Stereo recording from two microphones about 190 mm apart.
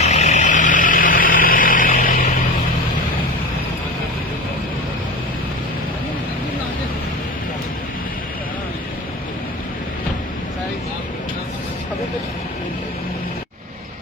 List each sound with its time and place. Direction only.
0.0 s vehicle: 35° left (ahead or behind)